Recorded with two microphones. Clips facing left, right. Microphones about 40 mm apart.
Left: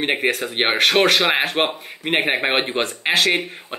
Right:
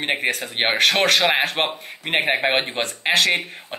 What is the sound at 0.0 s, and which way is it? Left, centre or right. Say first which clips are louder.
Speech: left 2 dB; centre.